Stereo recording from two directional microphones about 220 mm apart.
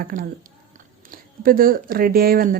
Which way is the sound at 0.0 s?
40° right (ahead or behind).